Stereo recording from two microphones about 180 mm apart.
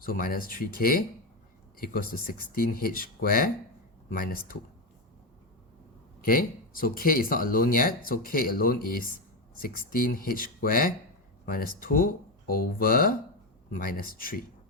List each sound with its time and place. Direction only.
0.0 s speech: 50° left (ahead or behind)
6.2 s speech: 55° left (ahead or behind)